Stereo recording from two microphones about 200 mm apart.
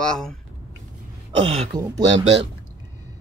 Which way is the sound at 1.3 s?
30° right (ahead or behind).